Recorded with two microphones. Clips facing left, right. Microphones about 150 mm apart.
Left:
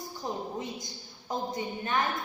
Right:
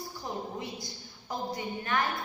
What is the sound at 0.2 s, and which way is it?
A woman's voice, 20° left (ahead or behind).